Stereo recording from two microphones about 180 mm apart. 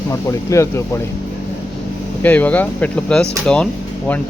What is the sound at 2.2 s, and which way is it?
Speech, 10° left (ahead or behind).